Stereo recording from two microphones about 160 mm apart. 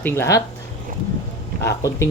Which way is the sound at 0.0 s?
20° left (ahead or behind).